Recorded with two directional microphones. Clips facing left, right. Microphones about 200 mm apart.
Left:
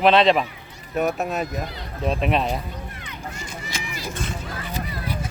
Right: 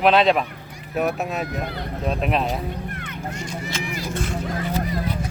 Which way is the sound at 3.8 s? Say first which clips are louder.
Right 5 dB; 50° right (ahead or behind).